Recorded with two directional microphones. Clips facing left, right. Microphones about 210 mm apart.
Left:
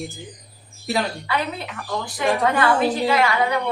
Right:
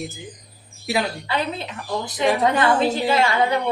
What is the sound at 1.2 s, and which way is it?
A woman's voice, 25° right (ahead or behind).